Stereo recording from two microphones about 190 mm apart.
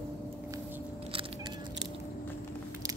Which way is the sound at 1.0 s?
25° right (ahead or behind).